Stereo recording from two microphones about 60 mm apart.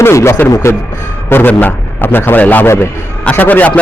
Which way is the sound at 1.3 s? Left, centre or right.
Left.